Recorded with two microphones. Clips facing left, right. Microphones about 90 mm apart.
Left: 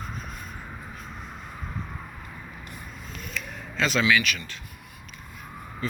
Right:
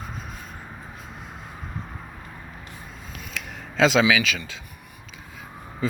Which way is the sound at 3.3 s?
90° right.